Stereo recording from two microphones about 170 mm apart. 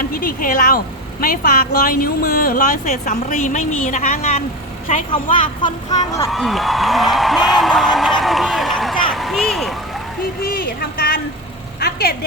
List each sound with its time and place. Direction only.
0.0 s a woman's voice: 55° left (ahead or behind); by 4.4 s 40° left (ahead or behind)
5.1 s speech: 30° left (ahead or behind)
6.3 s speech: centre (ahead or behind)
10.4 s speech: 60° left (ahead or behind)
11.8 s vehicle: 65° left (ahead or behind)